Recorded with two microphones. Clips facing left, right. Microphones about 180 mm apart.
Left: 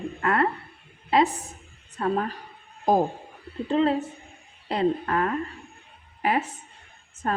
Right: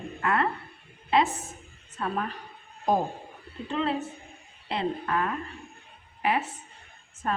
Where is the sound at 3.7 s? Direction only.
35° left (ahead or behind).